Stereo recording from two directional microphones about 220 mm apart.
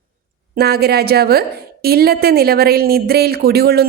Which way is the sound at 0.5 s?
45° right (ahead or behind).